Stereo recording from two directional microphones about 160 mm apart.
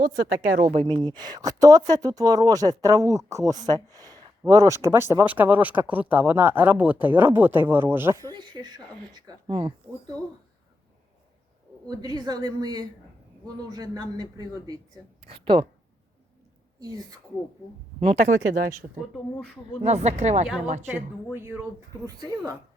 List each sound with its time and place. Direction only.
0.6 s speech: 35° right (ahead or behind)
11.9 s speech: 25° right (ahead or behind)
16.8 s speech: 25° right (ahead or behind)
18.0 s speech: 40° right (ahead or behind)
18.5 s speech: 60° right (ahead or behind)
19.8 s speech: 45° right (ahead or behind)
21.3 s speech: 15° right (ahead or behind)